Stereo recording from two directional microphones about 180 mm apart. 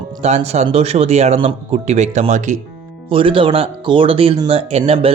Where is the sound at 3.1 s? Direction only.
30° right (ahead or behind).